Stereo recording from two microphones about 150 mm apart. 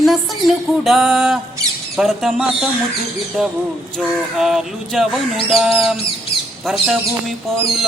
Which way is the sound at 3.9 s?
5° right (ahead or behind).